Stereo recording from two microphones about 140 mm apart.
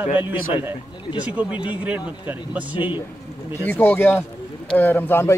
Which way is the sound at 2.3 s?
10° right (ahead or behind).